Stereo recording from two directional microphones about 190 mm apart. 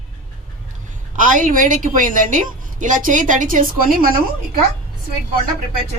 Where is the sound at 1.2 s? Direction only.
45° right (ahead or behind).